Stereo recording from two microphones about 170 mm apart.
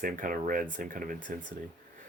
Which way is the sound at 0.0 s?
55° right (ahead or behind).